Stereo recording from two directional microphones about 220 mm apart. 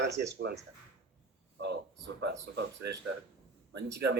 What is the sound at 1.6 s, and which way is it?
Speech, 50° right (ahead or behind).